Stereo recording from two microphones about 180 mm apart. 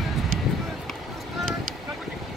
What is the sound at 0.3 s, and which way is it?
Run, 50° right (ahead or behind).